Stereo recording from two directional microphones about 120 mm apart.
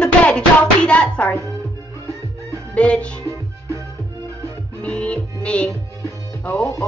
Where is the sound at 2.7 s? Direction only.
10° left (ahead or behind).